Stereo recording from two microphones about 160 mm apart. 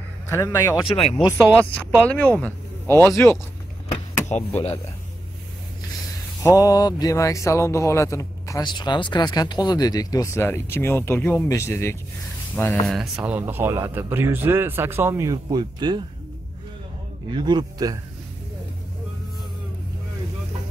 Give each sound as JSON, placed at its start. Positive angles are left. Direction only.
{"t": 0.3, "sound": "speech", "side_deg": 15}
{"t": 0.8, "sound": "speech", "side_deg": 35}
{"t": 1.4, "sound": "speech", "side_deg": 10}
{"t": 4.4, "sound": "speech", "side_deg": 10}
{"t": 6.4, "sound": "speech", "side_deg": 20}
{"t": 12.8, "sound": "speech", "side_deg": 0}
{"t": 17.3, "sound": "speech", "side_deg": -25}